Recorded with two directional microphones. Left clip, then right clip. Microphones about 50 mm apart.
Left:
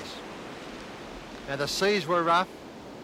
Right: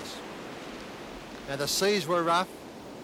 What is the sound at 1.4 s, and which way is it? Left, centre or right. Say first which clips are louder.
A man's voice: left 1 dB; right.